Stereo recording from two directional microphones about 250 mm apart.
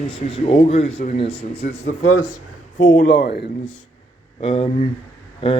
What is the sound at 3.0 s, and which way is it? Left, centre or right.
Speech, left.